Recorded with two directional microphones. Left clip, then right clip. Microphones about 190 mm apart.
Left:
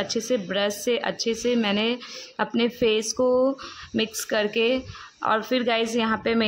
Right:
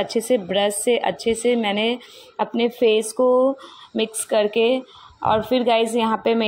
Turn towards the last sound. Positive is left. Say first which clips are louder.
# right 4 dB
turn(degrees=-5)  # may be behind; listen again after turning